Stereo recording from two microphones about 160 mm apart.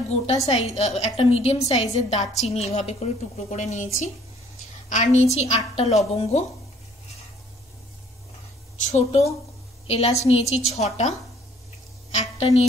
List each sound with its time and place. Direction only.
0.5 s a woman's voice: 40° left (ahead or behind)
8.8 s a woman's voice: 40° left (ahead or behind)